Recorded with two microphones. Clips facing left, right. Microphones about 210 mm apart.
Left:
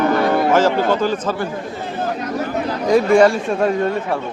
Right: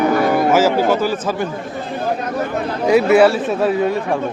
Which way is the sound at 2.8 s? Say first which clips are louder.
Right 1 dB; 10° right (ahead or behind).